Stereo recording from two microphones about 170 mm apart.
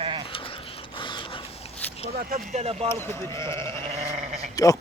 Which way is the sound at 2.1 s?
45° right (ahead or behind).